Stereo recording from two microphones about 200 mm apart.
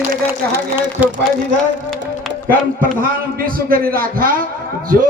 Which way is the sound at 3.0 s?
45° right (ahead or behind).